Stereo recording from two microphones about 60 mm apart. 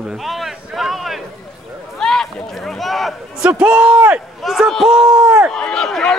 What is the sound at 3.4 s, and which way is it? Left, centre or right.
Speech, right.